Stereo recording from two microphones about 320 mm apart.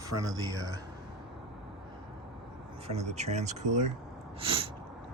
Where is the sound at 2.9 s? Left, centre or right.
Right.